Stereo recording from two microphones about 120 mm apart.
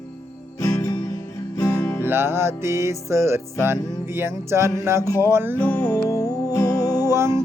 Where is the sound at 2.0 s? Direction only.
20° right (ahead or behind).